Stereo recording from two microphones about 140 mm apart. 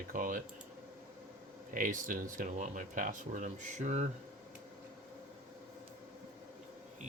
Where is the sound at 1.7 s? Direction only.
70° right (ahead or behind).